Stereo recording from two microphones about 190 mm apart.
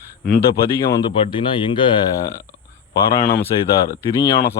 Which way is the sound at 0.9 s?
25° left (ahead or behind).